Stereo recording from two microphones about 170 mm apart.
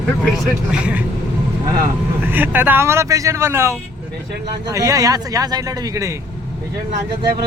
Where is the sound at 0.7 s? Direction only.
5° right (ahead or behind).